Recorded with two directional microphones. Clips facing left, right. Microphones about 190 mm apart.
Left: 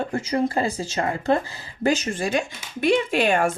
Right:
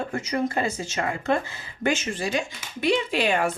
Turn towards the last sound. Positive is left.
turn(degrees=50)  # may be behind; listen again after turning